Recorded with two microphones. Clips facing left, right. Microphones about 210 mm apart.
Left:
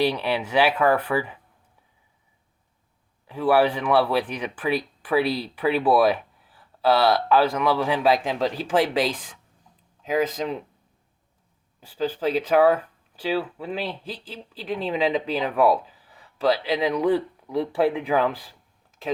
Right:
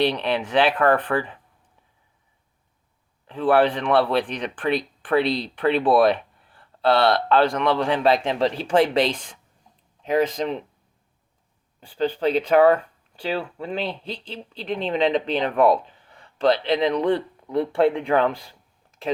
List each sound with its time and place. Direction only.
0.0 s speech: 5° left (ahead or behind)
3.2 s speech: 10° left (ahead or behind)
11.8 s speech: 5° left (ahead or behind)